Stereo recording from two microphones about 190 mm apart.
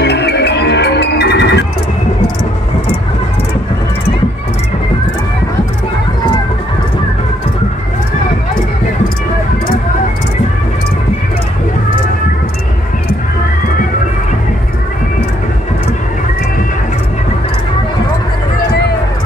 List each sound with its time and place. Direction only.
0.0 s music: 60° left (ahead or behind)